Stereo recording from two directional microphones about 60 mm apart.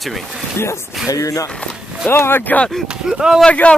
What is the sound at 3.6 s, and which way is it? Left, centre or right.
Speech, centre.